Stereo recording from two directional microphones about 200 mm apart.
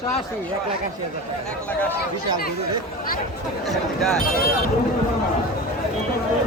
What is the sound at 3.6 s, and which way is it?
Speech, centre (ahead or behind).